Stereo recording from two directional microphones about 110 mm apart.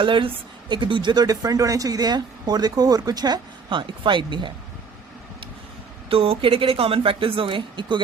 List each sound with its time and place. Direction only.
0.0 s a woman's voice: 50° right (ahead or behind)
6.1 s speech: 60° right (ahead or behind)